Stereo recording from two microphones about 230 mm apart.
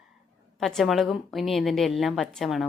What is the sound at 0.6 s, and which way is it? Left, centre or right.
A woman's voice, centre.